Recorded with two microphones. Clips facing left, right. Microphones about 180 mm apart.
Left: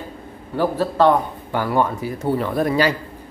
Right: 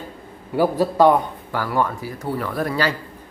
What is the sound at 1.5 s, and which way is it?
Speech, 20° left (ahead or behind).